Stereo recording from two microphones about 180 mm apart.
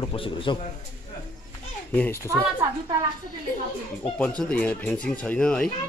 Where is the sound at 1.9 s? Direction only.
10° left (ahead or behind).